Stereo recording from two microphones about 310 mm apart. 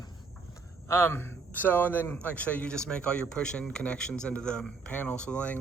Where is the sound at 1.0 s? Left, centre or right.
Centre.